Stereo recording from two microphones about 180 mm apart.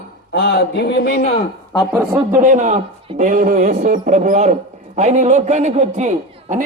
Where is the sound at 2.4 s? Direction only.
45° right (ahead or behind).